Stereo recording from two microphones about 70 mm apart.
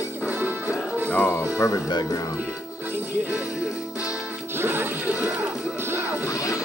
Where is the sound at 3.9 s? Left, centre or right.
Left.